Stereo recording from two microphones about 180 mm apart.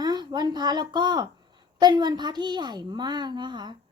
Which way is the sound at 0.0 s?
20° right (ahead or behind).